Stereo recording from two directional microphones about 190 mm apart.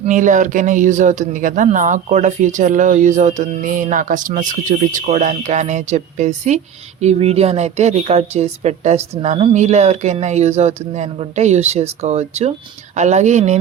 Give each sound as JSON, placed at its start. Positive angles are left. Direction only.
{"t": 0.0, "sound": "speech", "side_deg": -40}